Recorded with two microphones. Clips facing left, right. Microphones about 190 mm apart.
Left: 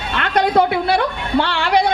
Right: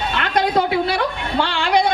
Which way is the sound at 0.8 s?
55° left (ahead or behind).